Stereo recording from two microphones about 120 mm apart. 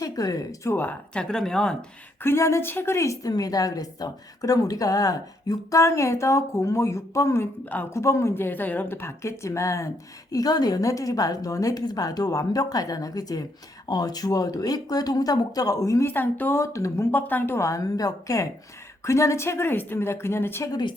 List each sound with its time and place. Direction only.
0.0 s speech: 30° left (ahead or behind); by 1.7 s 5° left (ahead or behind)
2.2 s a woman's voice: 20° left (ahead or behind)
7.6 s speech: 15° left (ahead or behind)
7.9 s a woman's voice: 25° left (ahead or behind)